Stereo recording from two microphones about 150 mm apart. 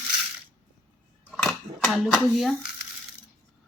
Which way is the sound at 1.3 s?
Centre (ahead or behind).